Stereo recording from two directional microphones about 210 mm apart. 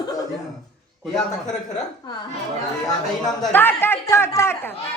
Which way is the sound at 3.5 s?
10° left (ahead or behind).